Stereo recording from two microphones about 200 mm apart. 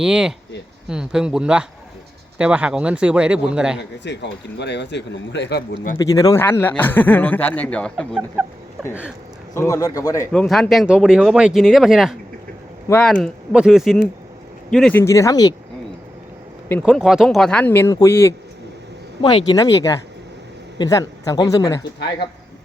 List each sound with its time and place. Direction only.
0.0 s speech: 5° right (ahead or behind)
3.8 s speech: 60° left (ahead or behind)
6.0 s speech: 20° left (ahead or behind)
8.9 s speech: 5° right (ahead or behind)
9.6 s speech: 15° left (ahead or behind)
10.3 s speech: centre (ahead or behind)
15.0 s speech: 15° left (ahead or behind)
16.8 s speech: centre (ahead or behind); by 21.8 s 15° left (ahead or behind)